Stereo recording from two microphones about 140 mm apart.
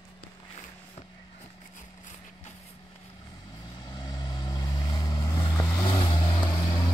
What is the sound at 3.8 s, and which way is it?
Vehicle, 30° left (ahead or behind).